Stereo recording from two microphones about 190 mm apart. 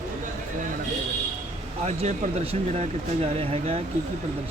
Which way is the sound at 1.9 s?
35° right (ahead or behind).